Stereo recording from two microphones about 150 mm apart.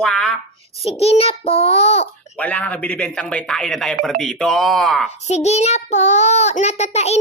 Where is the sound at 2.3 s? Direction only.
10° left (ahead or behind).